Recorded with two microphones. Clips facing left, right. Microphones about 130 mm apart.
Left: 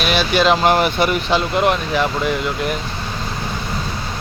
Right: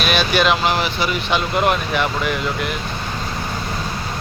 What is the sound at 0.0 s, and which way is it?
Speech, 25° left (ahead or behind).